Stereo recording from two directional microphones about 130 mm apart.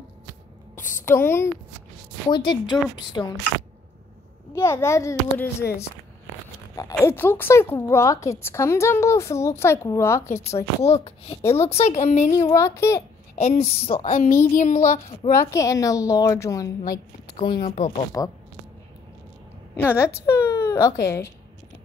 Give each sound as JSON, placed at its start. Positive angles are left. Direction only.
{"t": 1.0, "sound": "a woman's voice", "side_deg": 20}
{"t": 2.2, "sound": "a woman's voice", "side_deg": 40}
{"t": 4.6, "sound": "a woman's voice", "side_deg": 20}
{"t": 7.1, "sound": "a woman's voice", "side_deg": 15}
{"t": 10.8, "sound": "a woman's voice", "side_deg": 50}
{"t": 11.4, "sound": "speech", "side_deg": 20}
{"t": 11.7, "sound": "speech", "side_deg": 55}
{"t": 12.4, "sound": "a woman's voice", "side_deg": 25}
{"t": 13.4, "sound": "a woman's voice", "side_deg": 55}
{"t": 14.0, "sound": "a woman's voice", "side_deg": 75}
{"t": 15.5, "sound": "a woman's voice", "side_deg": 25}
{"t": 17.6, "sound": "a woman's voice", "side_deg": 75}
{"t": 18.2, "sound": "a woman's voice", "side_deg": 25}
{"t": 19.7, "sound": "a woman's voice", "side_deg": 20}